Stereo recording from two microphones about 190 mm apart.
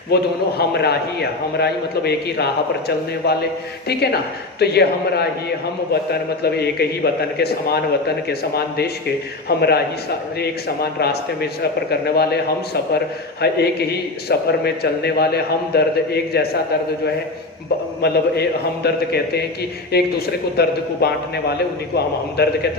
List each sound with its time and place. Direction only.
0.1 s a man's voice: 60° left (ahead or behind)
11.0 s a man's voice: 55° left (ahead or behind)
18.0 s a man's voice: 60° left (ahead or behind)